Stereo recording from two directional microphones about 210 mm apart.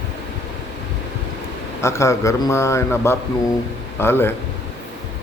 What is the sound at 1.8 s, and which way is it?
A man's voice, 15° left (ahead or behind).